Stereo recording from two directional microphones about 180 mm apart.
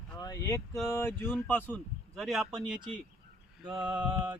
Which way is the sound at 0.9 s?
15° left (ahead or behind).